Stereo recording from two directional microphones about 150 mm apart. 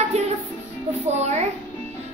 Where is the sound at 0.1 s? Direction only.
45° right (ahead or behind).